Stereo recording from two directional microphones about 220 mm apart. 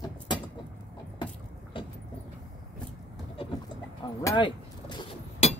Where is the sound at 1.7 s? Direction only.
25° left (ahead or behind).